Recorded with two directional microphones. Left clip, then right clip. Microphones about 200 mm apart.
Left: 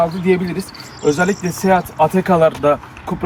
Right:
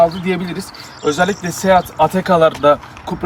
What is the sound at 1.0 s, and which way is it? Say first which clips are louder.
Speech: even; 15° right (ahead or behind).